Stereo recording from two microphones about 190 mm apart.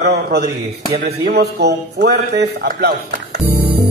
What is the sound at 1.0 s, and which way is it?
A man's voice, 60° right (ahead or behind).